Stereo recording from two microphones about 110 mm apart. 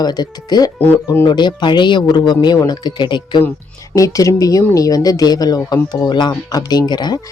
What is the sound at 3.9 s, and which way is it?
Speech, 30° left (ahead or behind).